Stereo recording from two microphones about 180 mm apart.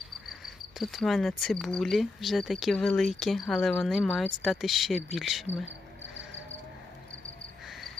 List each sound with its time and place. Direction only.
0.3 s cricket: centre (ahead or behind)